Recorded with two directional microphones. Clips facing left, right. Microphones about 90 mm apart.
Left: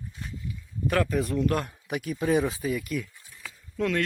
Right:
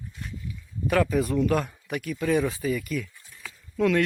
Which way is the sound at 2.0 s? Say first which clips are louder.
Even; 15° left (ahead or behind).